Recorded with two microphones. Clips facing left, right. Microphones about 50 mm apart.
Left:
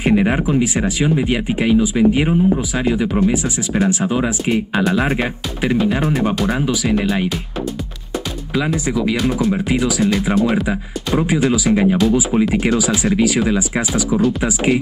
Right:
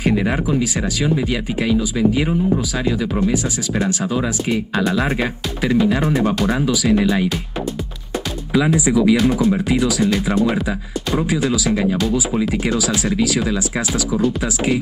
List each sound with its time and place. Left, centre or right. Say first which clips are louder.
0.0 s speech: left 3 dB; left
4.8 s speech: left 2 dB; centre
6.6 s speech: right 1 dB; centre
8.7 s speech: right 4 dB; centre
11.2 s speech: left 5 dB; left